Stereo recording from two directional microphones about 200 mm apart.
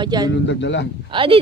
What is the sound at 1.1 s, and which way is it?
Speech, 25° right (ahead or behind).